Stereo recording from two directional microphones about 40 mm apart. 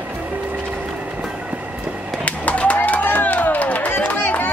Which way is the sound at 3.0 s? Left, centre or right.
Left.